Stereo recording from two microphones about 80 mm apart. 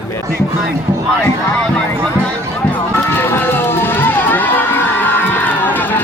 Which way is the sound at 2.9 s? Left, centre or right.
Left.